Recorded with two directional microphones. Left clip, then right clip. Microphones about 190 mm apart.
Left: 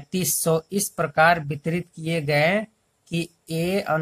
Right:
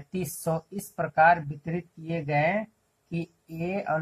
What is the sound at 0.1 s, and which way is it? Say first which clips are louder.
Speech: left 7 dB; 35° left (ahead or behind).